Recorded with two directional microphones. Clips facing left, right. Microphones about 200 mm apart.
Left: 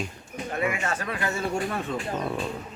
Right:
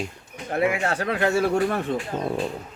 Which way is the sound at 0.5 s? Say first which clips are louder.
Right 5 dB; 65° right (ahead or behind).